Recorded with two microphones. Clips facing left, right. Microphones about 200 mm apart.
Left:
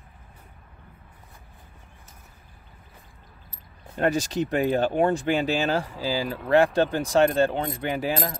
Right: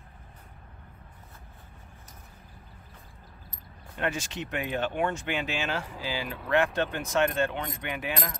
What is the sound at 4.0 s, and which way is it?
Speech, 40° left (ahead or behind).